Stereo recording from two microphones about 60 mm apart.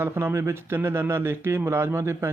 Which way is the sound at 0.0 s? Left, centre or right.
Right.